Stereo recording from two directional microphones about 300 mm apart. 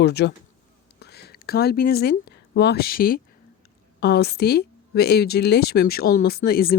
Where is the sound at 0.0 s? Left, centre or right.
Left.